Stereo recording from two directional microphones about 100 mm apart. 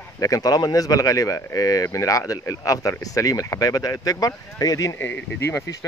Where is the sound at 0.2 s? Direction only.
35° left (ahead or behind).